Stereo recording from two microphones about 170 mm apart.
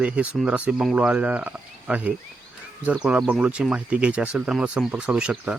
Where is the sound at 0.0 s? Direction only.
5° right (ahead or behind).